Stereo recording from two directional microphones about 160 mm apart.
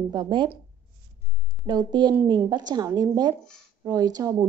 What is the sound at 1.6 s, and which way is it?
A woman's voice, 25° right (ahead or behind).